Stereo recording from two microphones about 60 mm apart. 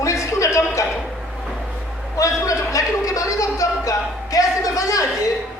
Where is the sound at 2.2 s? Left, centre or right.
Left.